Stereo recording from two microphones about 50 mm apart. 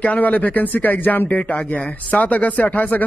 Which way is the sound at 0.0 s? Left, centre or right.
Left.